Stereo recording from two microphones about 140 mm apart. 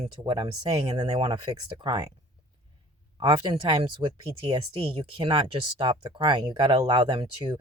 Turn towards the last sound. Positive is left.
turn(degrees=-30)  # may be behind; listen again after turning